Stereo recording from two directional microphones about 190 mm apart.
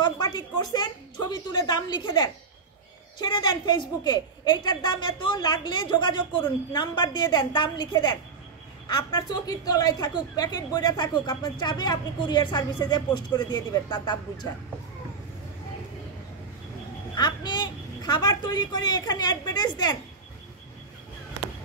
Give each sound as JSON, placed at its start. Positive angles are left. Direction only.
{"t": 0.0, "sound": "a woman's voice", "side_deg": 20}
{"t": 17.1, "sound": "a woman's voice", "side_deg": 20}